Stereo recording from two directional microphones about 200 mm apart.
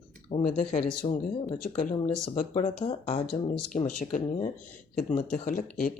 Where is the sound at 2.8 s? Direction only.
30° left (ahead or behind).